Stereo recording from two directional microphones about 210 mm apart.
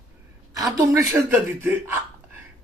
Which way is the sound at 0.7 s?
15° right (ahead or behind).